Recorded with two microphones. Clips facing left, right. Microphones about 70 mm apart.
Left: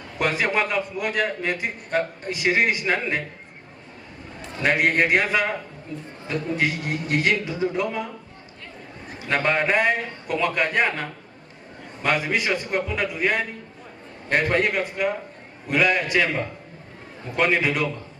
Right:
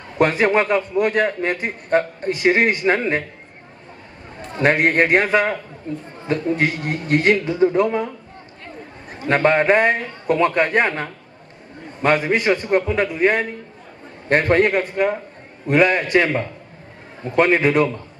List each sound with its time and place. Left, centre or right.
0.2 s a man's voice: right
4.5 s a man's voice: right
12.0 s a man's voice: right